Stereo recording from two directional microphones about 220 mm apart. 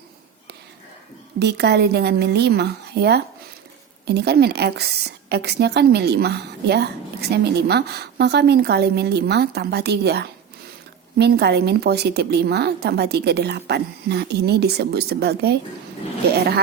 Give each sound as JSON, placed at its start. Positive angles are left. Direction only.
{"t": 1.4, "sound": "a woman's voice", "side_deg": -50}